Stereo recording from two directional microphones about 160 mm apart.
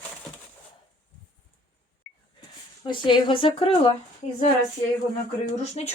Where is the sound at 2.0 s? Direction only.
5° left (ahead or behind).